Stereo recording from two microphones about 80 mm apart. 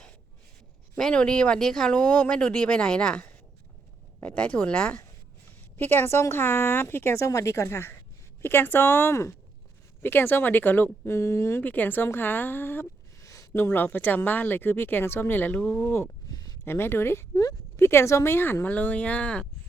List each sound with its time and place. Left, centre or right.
0.9 s speech: centre
5.7 s speech: left
13.1 s a sound: left
13.6 s speech: left
16.3 s a sound: left
16.6 s speech: left; by 19.5 s centre